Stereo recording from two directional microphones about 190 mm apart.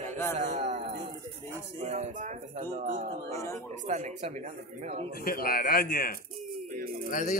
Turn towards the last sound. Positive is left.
turn(degrees=45)  # may be behind; listen again after turning